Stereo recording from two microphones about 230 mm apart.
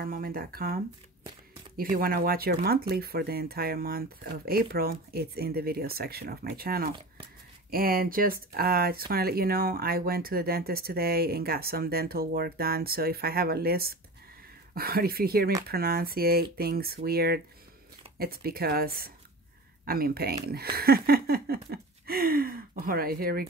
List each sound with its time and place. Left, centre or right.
0.0 s speech: right
1.8 s speech: right